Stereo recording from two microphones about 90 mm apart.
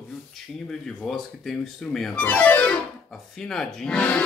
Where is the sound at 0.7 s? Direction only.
5° left (ahead or behind).